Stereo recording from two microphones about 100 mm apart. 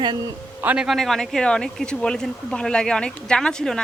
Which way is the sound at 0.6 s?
15° right (ahead or behind).